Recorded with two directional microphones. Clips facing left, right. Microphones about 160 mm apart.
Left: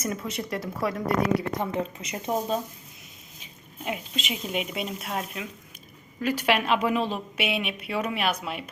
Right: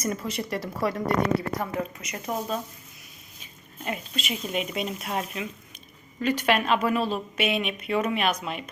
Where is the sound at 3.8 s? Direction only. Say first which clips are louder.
Even; 15° left (ahead or behind).